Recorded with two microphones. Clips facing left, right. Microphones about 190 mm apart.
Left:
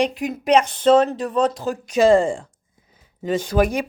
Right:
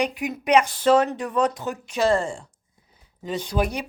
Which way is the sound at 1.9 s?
90° left.